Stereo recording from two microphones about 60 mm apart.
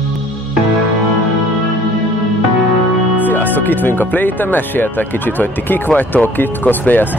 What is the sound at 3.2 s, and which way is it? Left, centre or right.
Speech, left.